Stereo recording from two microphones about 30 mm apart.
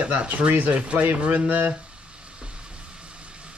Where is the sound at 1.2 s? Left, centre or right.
Right.